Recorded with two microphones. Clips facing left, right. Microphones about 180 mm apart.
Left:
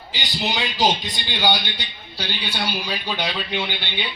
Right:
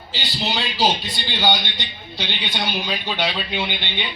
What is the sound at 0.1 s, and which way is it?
A man's voice, 15° left (ahead or behind).